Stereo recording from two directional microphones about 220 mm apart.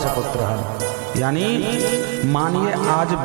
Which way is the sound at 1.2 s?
15° right (ahead or behind).